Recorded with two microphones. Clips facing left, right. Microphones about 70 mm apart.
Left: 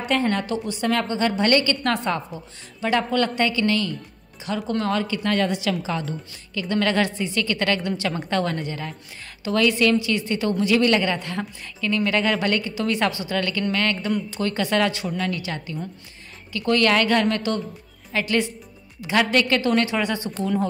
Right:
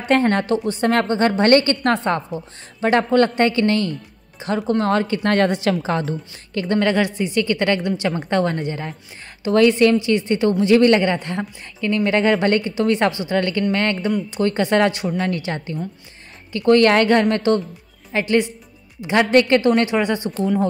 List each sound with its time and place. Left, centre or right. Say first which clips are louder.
0.1 s a woman's voice: right 6 dB; right
6.8 s a woman's voice: right 2 dB; right